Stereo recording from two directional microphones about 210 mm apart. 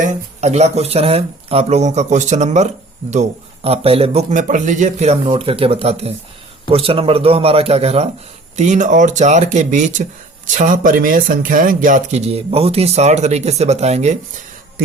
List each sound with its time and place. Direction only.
0.0 s speech: 35° right (ahead or behind)